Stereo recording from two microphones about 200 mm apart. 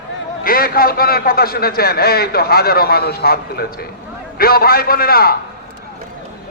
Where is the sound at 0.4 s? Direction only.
50° left (ahead or behind).